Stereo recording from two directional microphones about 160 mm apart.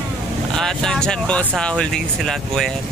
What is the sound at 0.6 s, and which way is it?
Speech, 5° left (ahead or behind).